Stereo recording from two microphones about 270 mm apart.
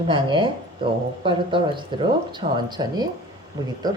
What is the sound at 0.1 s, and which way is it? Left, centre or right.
Speech, centre.